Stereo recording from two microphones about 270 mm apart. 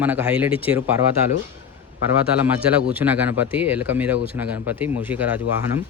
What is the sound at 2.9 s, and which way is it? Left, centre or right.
Speech, centre.